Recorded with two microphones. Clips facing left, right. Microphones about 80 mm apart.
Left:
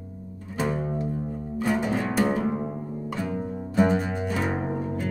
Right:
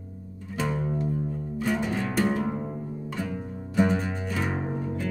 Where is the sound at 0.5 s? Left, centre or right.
Centre.